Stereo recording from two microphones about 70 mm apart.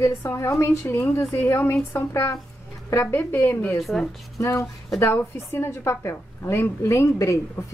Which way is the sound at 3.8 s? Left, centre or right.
Centre.